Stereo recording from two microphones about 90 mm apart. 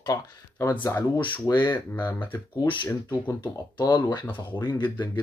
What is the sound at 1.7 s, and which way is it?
Speech, 25° left (ahead or behind).